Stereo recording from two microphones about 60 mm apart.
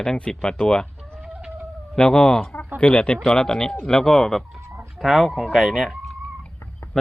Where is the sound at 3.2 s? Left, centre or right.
Centre.